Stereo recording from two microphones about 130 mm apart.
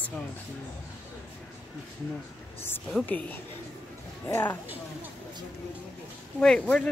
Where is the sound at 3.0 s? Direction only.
10° left (ahead or behind).